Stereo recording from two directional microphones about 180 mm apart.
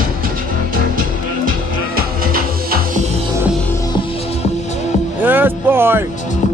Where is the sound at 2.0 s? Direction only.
55° right (ahead or behind).